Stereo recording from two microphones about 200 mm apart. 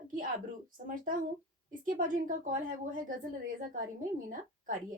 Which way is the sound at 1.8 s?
40° right (ahead or behind).